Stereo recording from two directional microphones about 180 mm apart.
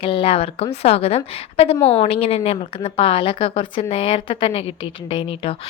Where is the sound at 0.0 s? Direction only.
30° left (ahead or behind).